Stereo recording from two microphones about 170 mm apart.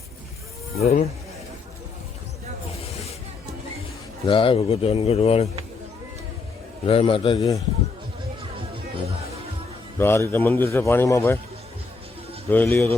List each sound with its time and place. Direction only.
0.8 s speech: 40° left (ahead or behind)
4.3 s speech: 30° left (ahead or behind)
6.8 s speech: 30° left (ahead or behind)
10.0 s a man's voice: 15° left (ahead or behind)
12.5 s a man's voice: 10° left (ahead or behind)